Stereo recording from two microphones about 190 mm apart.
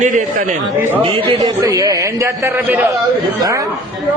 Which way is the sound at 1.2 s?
20° right (ahead or behind).